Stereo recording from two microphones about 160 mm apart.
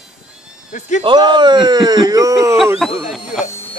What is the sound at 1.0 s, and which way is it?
Speech, 30° right (ahead or behind).